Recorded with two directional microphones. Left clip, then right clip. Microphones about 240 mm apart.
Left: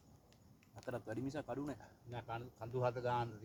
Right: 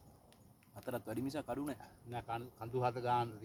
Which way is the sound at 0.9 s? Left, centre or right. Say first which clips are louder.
Right 3 dB; right.